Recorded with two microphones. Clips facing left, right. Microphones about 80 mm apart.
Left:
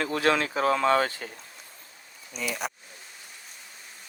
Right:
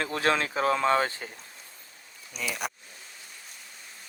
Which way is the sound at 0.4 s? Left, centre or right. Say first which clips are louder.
Left 1 dB; left.